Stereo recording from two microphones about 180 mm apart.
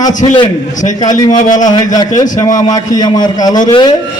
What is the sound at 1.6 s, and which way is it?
A man's voice, 20° left (ahead or behind).